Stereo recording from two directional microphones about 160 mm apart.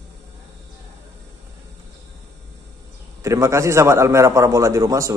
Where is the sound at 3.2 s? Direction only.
20° right (ahead or behind).